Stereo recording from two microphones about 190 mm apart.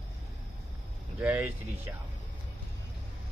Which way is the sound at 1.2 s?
10° right (ahead or behind).